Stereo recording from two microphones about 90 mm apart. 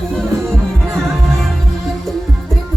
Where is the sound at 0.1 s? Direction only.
5° left (ahead or behind).